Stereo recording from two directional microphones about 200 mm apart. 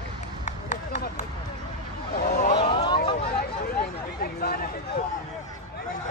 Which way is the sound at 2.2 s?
50° left (ahead or behind).